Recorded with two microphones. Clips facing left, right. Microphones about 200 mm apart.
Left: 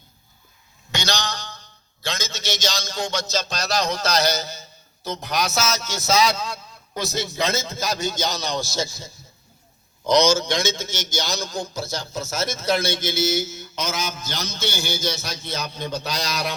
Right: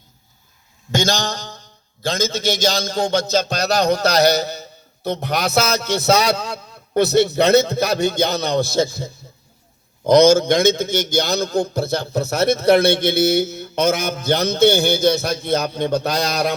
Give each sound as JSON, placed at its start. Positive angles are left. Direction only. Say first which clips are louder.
{"t": 0.9, "sound": "a man's voice", "louder": "right 7 dB", "side_deg": -50}